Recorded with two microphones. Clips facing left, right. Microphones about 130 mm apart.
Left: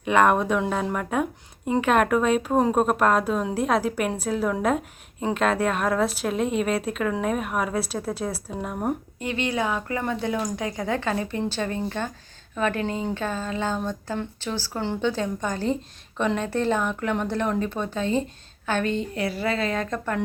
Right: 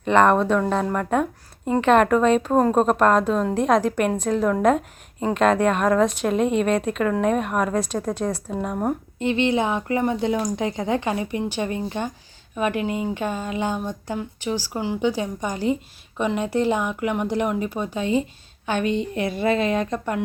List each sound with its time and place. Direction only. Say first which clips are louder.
0.0 s speech: right 3 dB; 5° left (ahead or behind)
9.1 s speech: right 6 dB; 25° right (ahead or behind)